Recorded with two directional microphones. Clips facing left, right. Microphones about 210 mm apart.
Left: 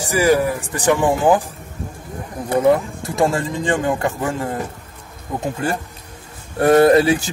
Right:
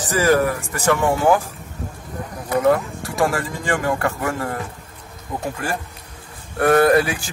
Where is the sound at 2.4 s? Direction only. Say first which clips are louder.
Left 2 dB; 25° left (ahead or behind).